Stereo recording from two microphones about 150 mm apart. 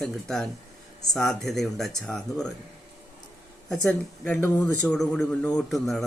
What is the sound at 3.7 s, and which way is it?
Speech, 5° left (ahead or behind).